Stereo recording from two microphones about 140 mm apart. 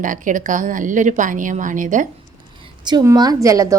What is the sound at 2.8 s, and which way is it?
Speech, 30° right (ahead or behind).